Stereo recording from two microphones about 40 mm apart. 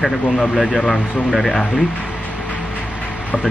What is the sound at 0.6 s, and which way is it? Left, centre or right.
Speech, centre.